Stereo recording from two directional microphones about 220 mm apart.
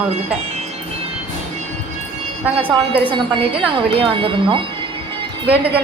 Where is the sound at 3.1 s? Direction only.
20° right (ahead or behind).